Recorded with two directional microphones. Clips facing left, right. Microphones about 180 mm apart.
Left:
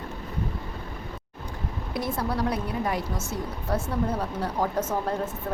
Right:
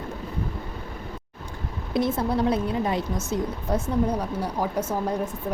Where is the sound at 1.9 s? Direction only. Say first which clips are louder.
Right 5 dB; 25° right (ahead or behind).